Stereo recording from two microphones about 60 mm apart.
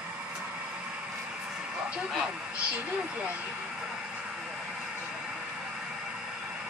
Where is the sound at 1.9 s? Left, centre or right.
Centre.